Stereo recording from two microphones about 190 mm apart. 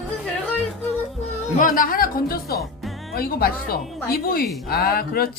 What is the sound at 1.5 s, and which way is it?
Speech, 45° left (ahead or behind).